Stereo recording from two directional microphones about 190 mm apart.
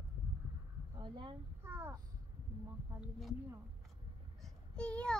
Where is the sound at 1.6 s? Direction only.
10° right (ahead or behind).